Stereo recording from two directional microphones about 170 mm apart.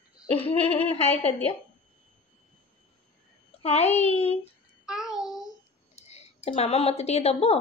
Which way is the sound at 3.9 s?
40° left (ahead or behind).